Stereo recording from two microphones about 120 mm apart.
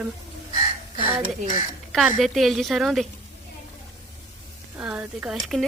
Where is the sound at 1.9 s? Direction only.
Centre (ahead or behind).